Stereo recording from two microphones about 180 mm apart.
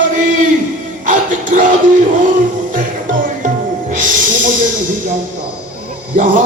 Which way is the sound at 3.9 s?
45° right (ahead or behind).